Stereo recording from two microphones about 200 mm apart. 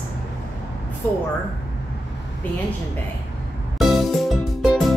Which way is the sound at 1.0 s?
10° left (ahead or behind).